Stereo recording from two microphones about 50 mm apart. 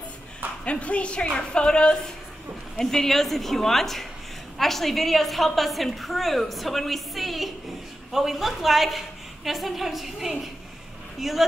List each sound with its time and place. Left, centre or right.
0.7 s a woman's voice: left; by 11.4 s centre